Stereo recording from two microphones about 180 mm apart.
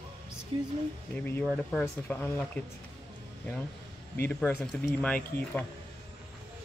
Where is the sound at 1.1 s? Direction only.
10° left (ahead or behind).